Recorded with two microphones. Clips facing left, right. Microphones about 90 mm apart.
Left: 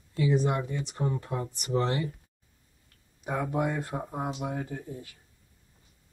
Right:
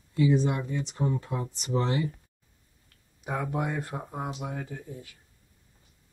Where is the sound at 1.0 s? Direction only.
20° right (ahead or behind).